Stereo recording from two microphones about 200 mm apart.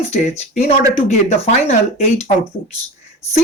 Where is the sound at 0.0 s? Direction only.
35° left (ahead or behind).